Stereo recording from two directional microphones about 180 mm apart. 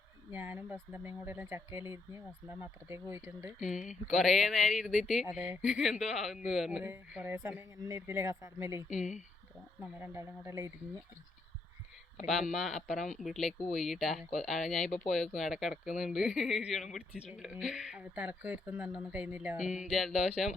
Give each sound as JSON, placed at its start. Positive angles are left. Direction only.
{"t": 0.3, "sound": "speech", "side_deg": -10}
{"t": 3.6, "sound": "speech", "side_deg": 45}
{"t": 4.2, "sound": "speech", "side_deg": 0}
{"t": 8.9, "sound": "speech", "side_deg": 40}
{"t": 10.0, "sound": "speech", "side_deg": -15}
{"t": 12.3, "sound": "speech", "side_deg": 0}
{"t": 14.8, "sound": "speech", "side_deg": 40}
{"t": 15.1, "sound": "speech", "side_deg": 0}